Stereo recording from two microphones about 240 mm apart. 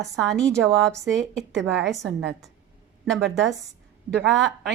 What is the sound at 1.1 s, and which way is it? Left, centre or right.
Speech, right.